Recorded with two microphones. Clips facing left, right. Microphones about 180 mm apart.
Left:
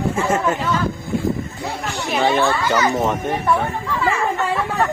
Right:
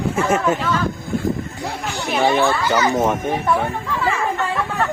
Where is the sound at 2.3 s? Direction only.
15° right (ahead or behind).